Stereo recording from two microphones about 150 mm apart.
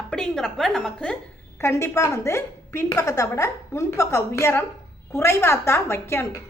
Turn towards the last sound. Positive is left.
turn(degrees=15)  # may be behind; listen again after turning